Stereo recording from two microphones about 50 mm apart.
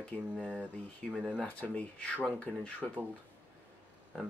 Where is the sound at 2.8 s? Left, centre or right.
Centre.